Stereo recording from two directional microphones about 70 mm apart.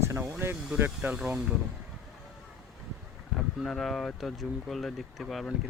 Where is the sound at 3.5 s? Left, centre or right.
Centre.